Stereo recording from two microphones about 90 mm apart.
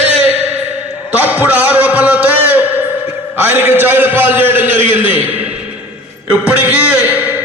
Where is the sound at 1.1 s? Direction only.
20° right (ahead or behind).